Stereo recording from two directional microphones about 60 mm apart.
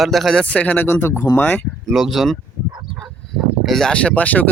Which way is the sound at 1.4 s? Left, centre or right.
Left.